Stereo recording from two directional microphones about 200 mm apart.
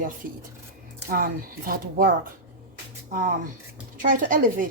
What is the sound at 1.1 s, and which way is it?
Speech, 45° right (ahead or behind).